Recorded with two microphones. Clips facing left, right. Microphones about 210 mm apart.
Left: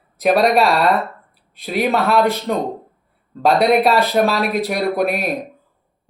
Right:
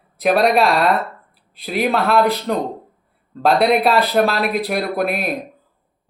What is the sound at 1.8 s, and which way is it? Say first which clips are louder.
A man's voice: even; centre (ahead or behind).